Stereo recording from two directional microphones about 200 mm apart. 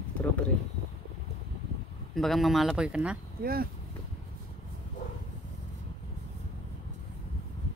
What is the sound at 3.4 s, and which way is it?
Speech, 50° right (ahead or behind).